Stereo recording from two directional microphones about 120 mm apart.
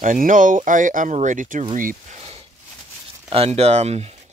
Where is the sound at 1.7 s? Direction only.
90° right.